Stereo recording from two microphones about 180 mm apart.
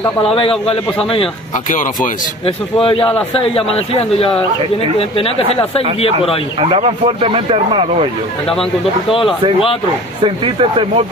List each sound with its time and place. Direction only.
0.2 s speech: 30° left (ahead or behind)
2.4 s speech: 30° left (ahead or behind)
6.6 s speech: 30° right (ahead or behind)
10.2 s speech: 30° right (ahead or behind)